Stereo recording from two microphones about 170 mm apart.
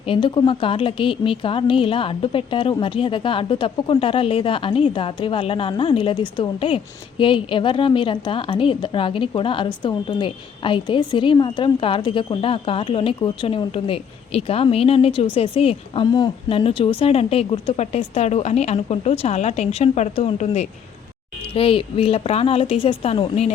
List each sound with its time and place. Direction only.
0.0 s a woman's voice: 30° left (ahead or behind)